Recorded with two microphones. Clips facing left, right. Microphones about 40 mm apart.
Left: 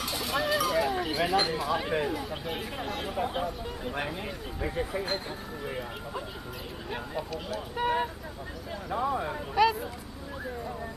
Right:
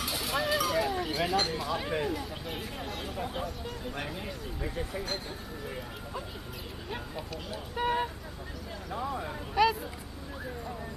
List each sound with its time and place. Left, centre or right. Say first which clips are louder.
0.0 s speech: left 1 dB; centre
8.9 s speech: left 5 dB; centre
9.6 s speech: left 1 dB; centre